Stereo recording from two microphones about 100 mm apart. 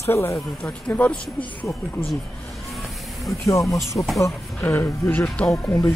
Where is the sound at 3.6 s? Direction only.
35° left (ahead or behind).